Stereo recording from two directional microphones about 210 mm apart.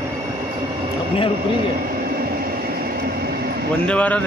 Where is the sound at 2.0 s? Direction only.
45° right (ahead or behind).